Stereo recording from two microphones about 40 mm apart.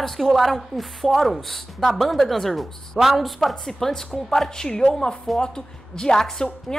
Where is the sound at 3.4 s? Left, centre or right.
Centre.